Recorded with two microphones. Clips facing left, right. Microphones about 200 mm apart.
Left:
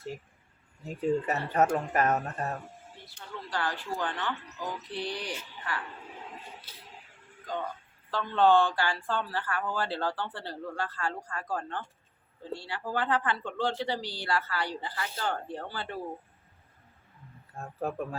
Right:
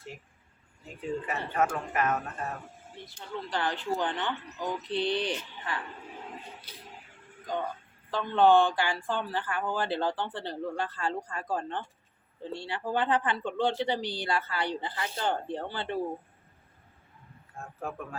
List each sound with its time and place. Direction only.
0.9 s speech: 40° left (ahead or behind)
3.2 s speech: 20° right (ahead or behind)
8.1 s speech: 15° right (ahead or behind)
17.7 s speech: 35° left (ahead or behind)